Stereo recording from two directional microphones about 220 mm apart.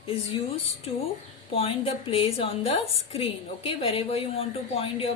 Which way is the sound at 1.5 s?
25° left (ahead or behind).